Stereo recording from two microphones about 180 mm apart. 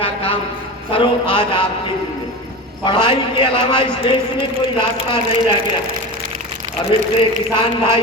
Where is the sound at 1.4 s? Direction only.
25° left (ahead or behind).